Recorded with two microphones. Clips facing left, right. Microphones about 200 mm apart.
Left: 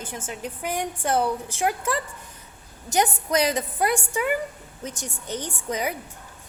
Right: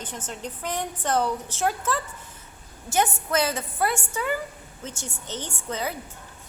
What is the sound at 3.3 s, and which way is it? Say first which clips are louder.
A woman's voice: left 2 dB; 15° left (ahead or behind).